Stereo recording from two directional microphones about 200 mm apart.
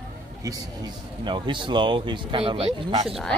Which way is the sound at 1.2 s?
25° right (ahead or behind).